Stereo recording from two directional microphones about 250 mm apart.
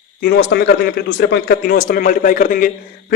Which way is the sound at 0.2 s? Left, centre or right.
Left.